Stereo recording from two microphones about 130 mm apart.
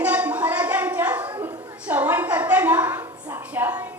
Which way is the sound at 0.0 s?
10° right (ahead or behind).